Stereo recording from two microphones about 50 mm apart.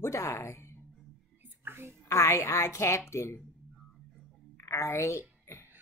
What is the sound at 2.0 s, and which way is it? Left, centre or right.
A woman's voice, left.